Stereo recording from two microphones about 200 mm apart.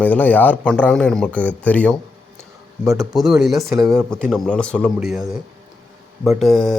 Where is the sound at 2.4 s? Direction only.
15° right (ahead or behind).